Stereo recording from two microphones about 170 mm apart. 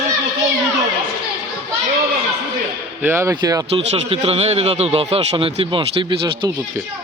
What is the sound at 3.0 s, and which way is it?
Speech, 15° right (ahead or behind).